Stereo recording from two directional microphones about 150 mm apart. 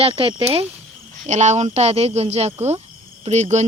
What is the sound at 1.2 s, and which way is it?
Speech, 50° right (ahead or behind).